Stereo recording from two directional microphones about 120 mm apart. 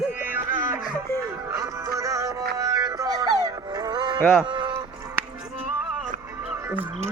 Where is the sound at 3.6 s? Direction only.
35° right (ahead or behind).